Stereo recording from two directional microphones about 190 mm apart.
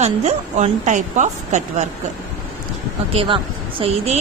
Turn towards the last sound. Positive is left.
turn(degrees=-30)  # may be behind; listen again after turning